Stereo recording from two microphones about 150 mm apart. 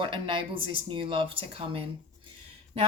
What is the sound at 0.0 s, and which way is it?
A woman's voice, 35° right (ahead or behind).